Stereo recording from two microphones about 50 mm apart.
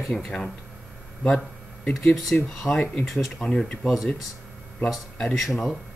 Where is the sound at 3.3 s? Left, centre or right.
Centre.